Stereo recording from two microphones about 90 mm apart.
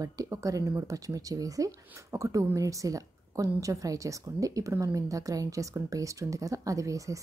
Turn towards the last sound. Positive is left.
turn(degrees=-35)  # may be behind; listen again after turning